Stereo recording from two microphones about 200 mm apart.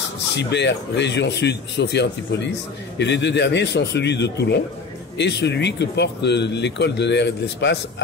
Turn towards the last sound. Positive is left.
turn(degrees=60)  # may be behind; listen again after turning